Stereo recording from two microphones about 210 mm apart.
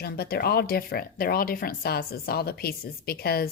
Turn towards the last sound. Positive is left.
turn(degrees=45)  # may be behind; listen again after turning